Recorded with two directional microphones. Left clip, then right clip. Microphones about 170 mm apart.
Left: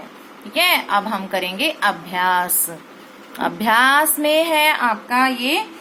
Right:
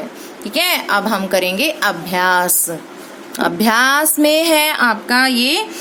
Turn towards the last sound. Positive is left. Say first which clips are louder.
# right 3 dB
turn(degrees=-60)  # may be behind; listen again after turning